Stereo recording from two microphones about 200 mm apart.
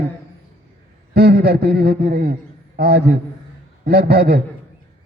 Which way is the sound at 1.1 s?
50° right (ahead or behind).